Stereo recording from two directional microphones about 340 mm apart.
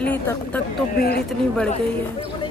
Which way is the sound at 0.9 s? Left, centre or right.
Left.